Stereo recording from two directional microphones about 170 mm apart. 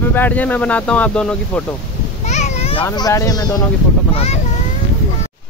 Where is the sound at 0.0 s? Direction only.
10° left (ahead or behind).